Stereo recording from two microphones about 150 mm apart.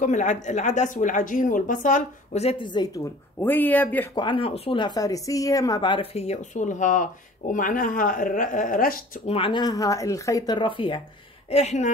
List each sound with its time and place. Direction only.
0.0 s speech: 55° left (ahead or behind)
2.6 s a woman's voice: 30° left (ahead or behind)
3.0 s speech: 15° left (ahead or behind)
4.1 s speech: 30° left (ahead or behind)
6.1 s speech: 45° left (ahead or behind); by 9.0 s 70° left (ahead or behind)
9.3 s speech: 35° left (ahead or behind)
11.5 s speech: 50° left (ahead or behind)